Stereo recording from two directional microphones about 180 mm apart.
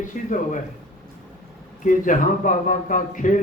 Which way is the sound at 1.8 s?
45° left (ahead or behind).